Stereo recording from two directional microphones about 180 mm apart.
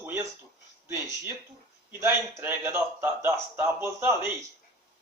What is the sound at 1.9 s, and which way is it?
Speech, 15° right (ahead or behind).